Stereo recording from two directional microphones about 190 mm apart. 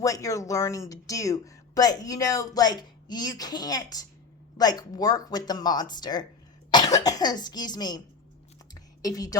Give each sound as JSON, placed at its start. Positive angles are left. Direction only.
{"t": 0.0, "sound": "speech", "side_deg": 15}
{"t": 6.7, "sound": "cough", "side_deg": 20}
{"t": 7.0, "sound": "speech", "side_deg": 20}
{"t": 8.7, "sound": "a sound", "side_deg": 20}